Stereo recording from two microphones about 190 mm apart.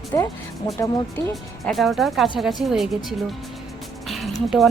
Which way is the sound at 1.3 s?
Centre (ahead or behind).